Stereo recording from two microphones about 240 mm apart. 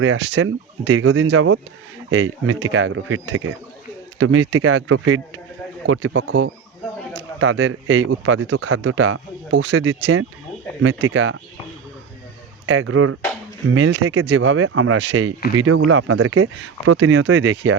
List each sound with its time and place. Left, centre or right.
0.0 s speech: right
12.6 s speech: right